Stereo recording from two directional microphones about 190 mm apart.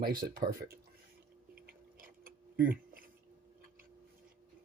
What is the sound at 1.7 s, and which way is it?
Tick-tock, 50° right (ahead or behind).